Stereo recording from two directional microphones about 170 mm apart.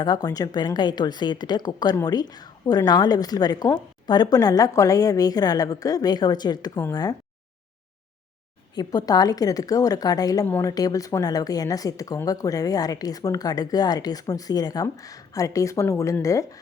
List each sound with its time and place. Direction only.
0.0 s a woman's voice: 25° left (ahead or behind)
8.7 s a woman's voice: 25° left (ahead or behind)